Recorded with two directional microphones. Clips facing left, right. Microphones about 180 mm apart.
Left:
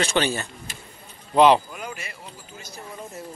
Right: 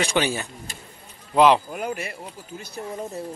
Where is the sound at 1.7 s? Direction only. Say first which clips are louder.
Right 7 dB; 50° right (ahead or behind).